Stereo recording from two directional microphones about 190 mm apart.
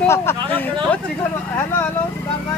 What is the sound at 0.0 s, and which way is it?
Speech, 15° left (ahead or behind).